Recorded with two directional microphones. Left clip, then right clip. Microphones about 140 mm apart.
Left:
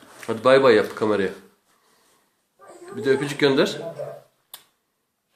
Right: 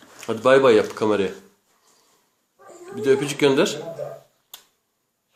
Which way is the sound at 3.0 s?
10° right (ahead or behind).